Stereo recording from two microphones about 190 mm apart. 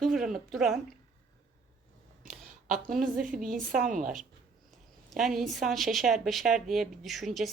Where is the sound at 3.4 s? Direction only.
45° right (ahead or behind).